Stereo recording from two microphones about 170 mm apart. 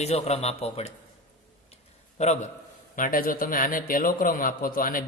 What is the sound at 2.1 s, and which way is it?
Speech, 40° left (ahead or behind).